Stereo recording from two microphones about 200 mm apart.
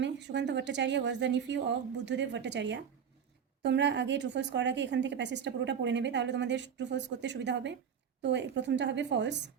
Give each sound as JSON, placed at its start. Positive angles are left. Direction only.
{"t": 0.0, "sound": "a woman's voice", "side_deg": -60}